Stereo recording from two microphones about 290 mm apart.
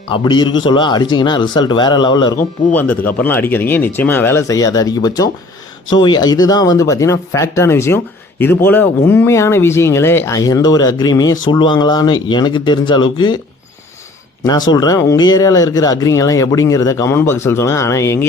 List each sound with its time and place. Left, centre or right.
0.1 s speech: centre
14.4 s speech: centre